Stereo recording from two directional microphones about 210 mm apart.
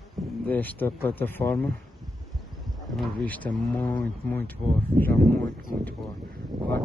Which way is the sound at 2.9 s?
5° left (ahead or behind).